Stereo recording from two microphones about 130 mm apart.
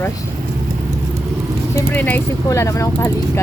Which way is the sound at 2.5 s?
25° left (ahead or behind).